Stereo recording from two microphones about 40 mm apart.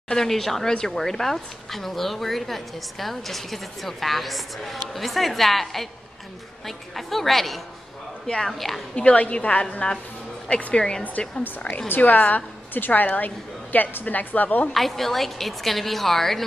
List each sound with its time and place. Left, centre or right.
0.1 s a woman's voice: centre
8.9 s a woman's voice: left
10.7 s speech: centre
12.0 s a woman's voice: left
14.7 s a woman's voice: centre